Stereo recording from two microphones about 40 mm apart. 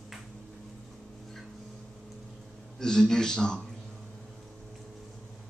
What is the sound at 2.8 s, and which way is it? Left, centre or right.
Speech, centre.